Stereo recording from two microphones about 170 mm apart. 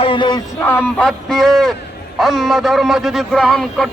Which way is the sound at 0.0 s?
30° left (ahead or behind).